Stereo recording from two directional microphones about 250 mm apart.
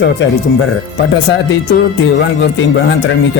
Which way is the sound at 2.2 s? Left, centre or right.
Left.